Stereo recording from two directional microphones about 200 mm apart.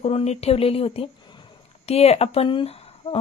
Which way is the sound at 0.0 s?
30° left (ahead or behind).